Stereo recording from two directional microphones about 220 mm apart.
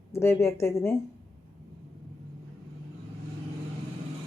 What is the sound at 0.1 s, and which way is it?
Speech, 10° left (ahead or behind).